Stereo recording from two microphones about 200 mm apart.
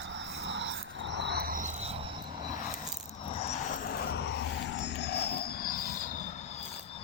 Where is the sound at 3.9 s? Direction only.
55° left (ahead or behind).